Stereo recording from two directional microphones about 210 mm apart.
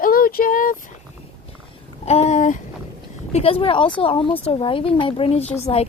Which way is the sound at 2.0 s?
30° left (ahead or behind).